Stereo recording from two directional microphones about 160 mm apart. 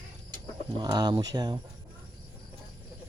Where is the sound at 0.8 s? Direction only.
25° right (ahead or behind).